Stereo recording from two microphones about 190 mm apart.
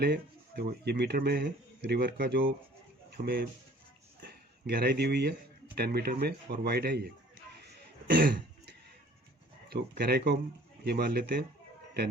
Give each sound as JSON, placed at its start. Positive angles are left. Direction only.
{"t": 0.0, "sound": "speech", "side_deg": -55}
{"t": 4.2, "sound": "a sound", "side_deg": -55}
{"t": 5.7, "sound": "speech", "side_deg": -55}
{"t": 7.6, "sound": "cough", "side_deg": -60}
{"t": 9.6, "sound": "speech", "side_deg": -55}